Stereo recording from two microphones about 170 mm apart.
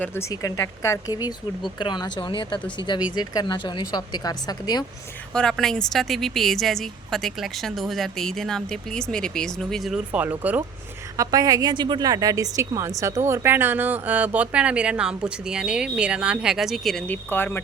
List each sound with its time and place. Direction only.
0.0 s speech: 15° left (ahead or behind)
5.3 s speech: 5° left (ahead or behind)
11.2 s a woman's voice: 20° right (ahead or behind); by 17.6 s 10° left (ahead or behind)